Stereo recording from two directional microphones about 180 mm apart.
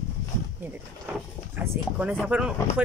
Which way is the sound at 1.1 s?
10° right (ahead or behind).